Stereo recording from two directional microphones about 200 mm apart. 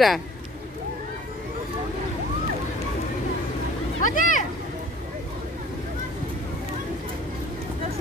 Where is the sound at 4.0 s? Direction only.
40° left (ahead or behind).